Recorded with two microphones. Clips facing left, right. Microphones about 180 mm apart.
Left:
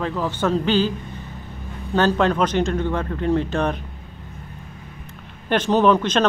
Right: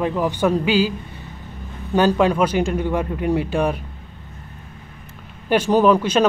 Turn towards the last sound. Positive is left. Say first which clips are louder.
# right 2 dB
turn(degrees=-10)  # may be behind; listen again after turning